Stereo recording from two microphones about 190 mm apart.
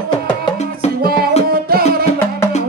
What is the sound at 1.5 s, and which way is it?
Music, 50° right (ahead or behind).